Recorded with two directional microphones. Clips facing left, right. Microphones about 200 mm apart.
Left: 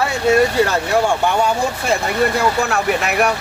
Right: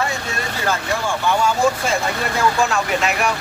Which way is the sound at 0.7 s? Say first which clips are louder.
Left 5 dB; 65° left (ahead or behind).